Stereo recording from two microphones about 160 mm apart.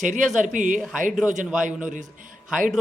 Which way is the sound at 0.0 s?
50° right (ahead or behind).